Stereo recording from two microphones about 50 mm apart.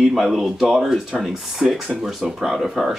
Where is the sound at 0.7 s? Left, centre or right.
Centre.